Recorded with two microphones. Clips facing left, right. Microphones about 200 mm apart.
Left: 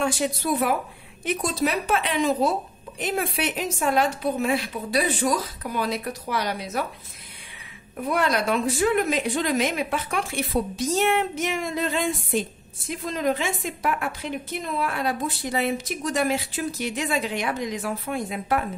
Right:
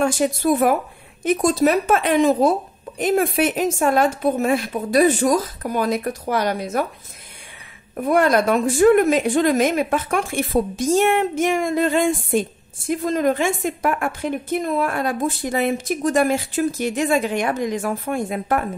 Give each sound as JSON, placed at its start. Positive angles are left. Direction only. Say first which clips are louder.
{"t": 0.0, "sound": "a woman's voice", "louder": "right 6 dB", "side_deg": -50}
{"t": 7.9, "sound": "a woman's voice", "louder": "right 7 dB", "side_deg": -50}